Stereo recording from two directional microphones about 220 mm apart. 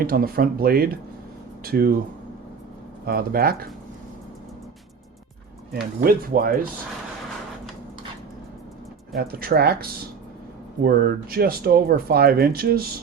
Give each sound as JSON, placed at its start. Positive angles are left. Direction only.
{"t": 0.0, "sound": "speech", "side_deg": -40}
{"t": 3.1, "sound": "speech", "side_deg": -40}
{"t": 5.7, "sound": "speech", "side_deg": -45}
{"t": 9.1, "sound": "speech", "side_deg": -45}
{"t": 10.8, "sound": "speech", "side_deg": -45}